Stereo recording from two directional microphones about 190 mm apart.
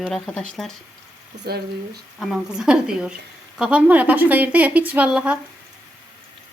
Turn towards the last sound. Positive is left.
turn(degrees=-5)  # may be behind; listen again after turning